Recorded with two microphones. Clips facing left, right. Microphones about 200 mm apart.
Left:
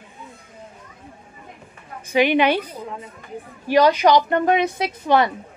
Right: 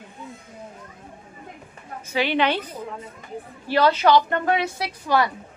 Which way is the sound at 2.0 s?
15° left (ahead or behind).